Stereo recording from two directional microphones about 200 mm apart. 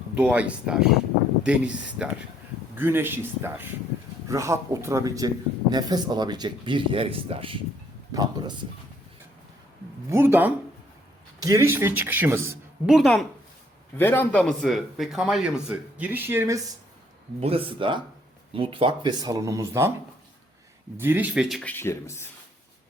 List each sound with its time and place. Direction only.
0.1 s a man's voice: 5° right (ahead or behind)
10.1 s a man's voice: 10° right (ahead or behind)
17.4 s speech: 25° right (ahead or behind)
21.0 s speech: 10° right (ahead or behind)
21.6 s speech: 10° left (ahead or behind)